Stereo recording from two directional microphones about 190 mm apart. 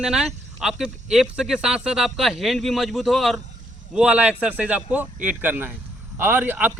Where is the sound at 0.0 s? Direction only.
5° right (ahead or behind).